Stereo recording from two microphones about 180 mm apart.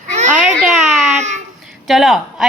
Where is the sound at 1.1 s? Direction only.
40° right (ahead or behind).